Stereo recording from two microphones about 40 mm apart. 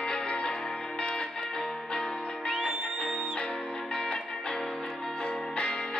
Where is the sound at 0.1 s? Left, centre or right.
Left.